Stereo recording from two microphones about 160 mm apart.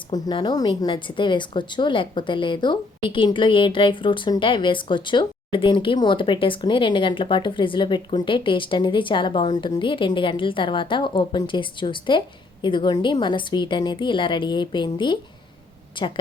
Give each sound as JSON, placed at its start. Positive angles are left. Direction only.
{"t": 0.1, "sound": "a woman's voice", "side_deg": 25}